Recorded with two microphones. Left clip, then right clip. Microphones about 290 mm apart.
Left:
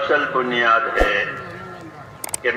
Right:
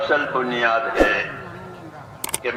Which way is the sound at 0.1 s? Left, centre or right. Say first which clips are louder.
Left 3 dB; centre.